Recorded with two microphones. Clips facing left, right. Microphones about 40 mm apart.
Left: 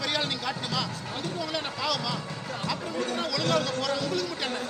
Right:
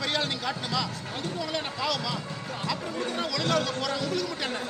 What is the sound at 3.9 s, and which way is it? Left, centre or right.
Speech, right.